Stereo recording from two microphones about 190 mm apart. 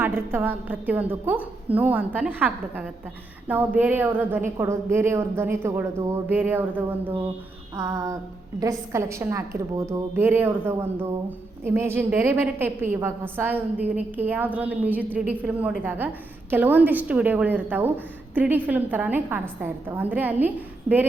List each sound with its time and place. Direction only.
0.0 s a woman's voice: 10° right (ahead or behind)